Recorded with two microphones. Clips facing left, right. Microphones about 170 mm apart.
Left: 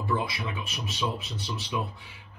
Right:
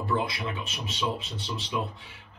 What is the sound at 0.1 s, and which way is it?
Speech, 5° left (ahead or behind).